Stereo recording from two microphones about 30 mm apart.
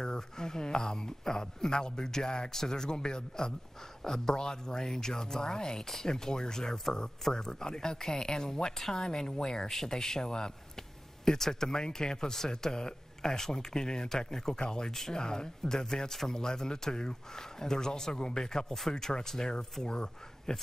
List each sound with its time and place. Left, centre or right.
0.0 s speech: left
11.2 s speech: centre